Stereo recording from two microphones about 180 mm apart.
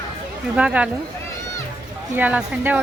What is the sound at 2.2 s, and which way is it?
Speech, 5° right (ahead or behind).